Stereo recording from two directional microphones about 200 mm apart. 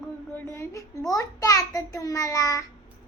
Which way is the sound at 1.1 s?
15° left (ahead or behind).